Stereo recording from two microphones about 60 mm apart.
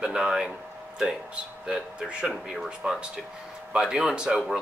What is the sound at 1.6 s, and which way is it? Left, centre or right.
Speech, centre.